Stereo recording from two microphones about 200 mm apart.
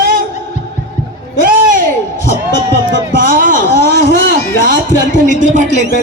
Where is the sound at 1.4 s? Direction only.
40° right (ahead or behind).